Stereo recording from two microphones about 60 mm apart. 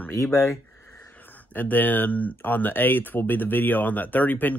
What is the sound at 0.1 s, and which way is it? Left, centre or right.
Speech, left.